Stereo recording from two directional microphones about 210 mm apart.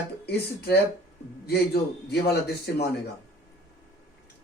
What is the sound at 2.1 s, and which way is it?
Speech, 50° left (ahead or behind).